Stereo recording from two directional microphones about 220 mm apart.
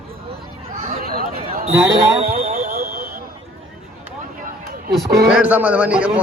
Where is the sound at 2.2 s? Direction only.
40° right (ahead or behind).